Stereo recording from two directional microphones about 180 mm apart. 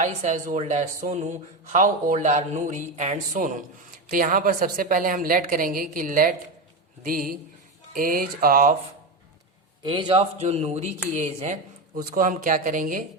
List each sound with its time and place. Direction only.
0.0 s speech: 45° right (ahead or behind)
9.8 s a man's voice: 25° right (ahead or behind)
12.1 s speech: 50° right (ahead or behind)